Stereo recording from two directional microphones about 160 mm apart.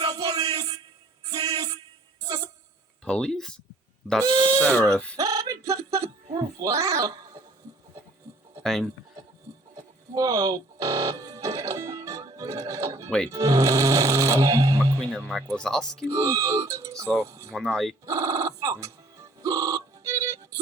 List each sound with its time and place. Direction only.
0.0 s music: 20° right (ahead or behind)
3.0 s speech: 5° left (ahead or behind)
4.2 s speech: 25° right (ahead or behind)
4.6 s speech: 10° left (ahead or behind)
5.1 s a sound: 20° right (ahead or behind)
8.6 s speech: centre (ahead or behind)
9.7 s music: 20° right (ahead or behind)
13.1 s speech: 5° left (ahead or behind)
13.3 s speech: 20° right (ahead or behind)
15.1 s speech: 5° left (ahead or behind)
16.0 s speech: 20° right (ahead or behind)
17.5 s speech: centre (ahead or behind)
18.0 s music: 20° right (ahead or behind)